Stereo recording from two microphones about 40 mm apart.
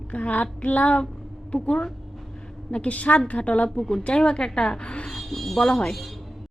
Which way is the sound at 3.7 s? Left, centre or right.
Centre.